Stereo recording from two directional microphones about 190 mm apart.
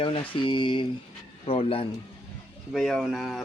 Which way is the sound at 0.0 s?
25° left (ahead or behind).